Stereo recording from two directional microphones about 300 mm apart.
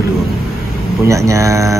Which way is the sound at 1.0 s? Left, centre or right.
Centre.